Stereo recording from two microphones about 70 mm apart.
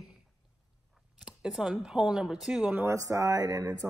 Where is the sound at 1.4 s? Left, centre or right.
Centre.